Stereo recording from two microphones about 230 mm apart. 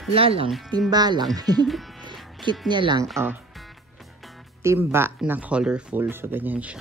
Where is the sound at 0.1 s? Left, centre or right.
Right.